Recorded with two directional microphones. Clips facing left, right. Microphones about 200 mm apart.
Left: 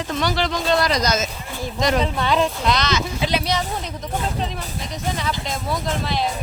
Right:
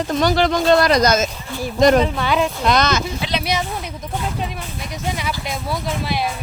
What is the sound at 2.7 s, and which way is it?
Speech, 50° right (ahead or behind).